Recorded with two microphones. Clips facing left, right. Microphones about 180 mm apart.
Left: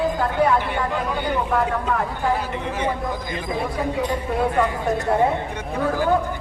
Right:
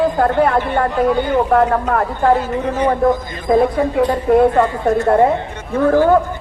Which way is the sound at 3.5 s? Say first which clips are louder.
Right 12 dB; 55° right (ahead or behind).